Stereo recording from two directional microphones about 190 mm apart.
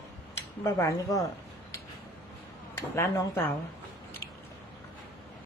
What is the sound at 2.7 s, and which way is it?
Speech, 15° left (ahead or behind).